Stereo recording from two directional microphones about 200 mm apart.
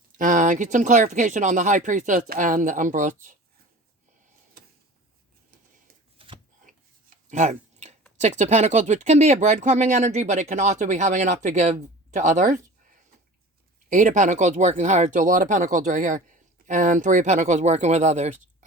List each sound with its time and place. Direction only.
0.2 s speech: 40° right (ahead or behind)
6.1 s shuffling cards: 25° right (ahead or behind)
6.7 s a sound: 40° right (ahead or behind)
7.3 s chewing: 35° right (ahead or behind)
8.2 s speech: 35° right (ahead or behind)
13.9 s speech: 40° right (ahead or behind)